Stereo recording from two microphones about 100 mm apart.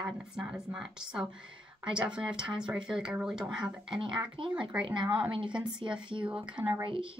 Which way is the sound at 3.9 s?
60° right (ahead or behind).